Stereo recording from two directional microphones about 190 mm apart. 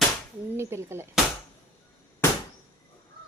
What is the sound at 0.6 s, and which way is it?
Speech, 15° right (ahead or behind).